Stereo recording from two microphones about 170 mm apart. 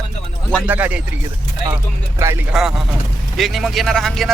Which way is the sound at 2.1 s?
15° right (ahead or behind).